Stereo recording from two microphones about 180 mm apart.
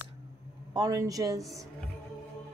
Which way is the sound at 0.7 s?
20° right (ahead or behind).